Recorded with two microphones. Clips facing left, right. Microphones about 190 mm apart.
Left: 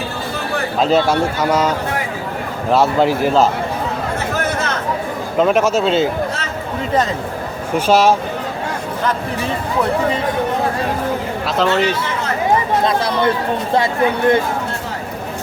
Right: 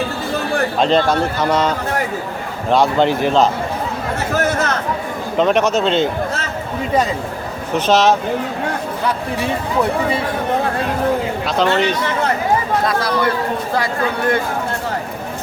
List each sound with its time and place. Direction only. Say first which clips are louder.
0.8 s a man's voice: left 2 dB; 5° left (ahead or behind)
5.4 s a man's voice: left 1 dB; 5° left (ahead or behind)
7.8 s speech: left 1 dB; 10° left (ahead or behind)
11.4 s a man's voice: left 1 dB; centre (ahead or behind)
12.8 s speech: left 1 dB; 25° left (ahead or behind)